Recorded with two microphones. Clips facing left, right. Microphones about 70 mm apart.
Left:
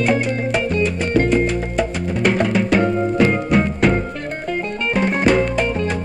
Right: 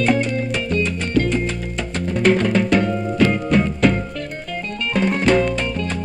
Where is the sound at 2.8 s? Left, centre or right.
Left.